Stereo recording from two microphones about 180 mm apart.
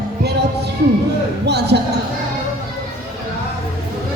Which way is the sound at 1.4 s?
65° right (ahead or behind).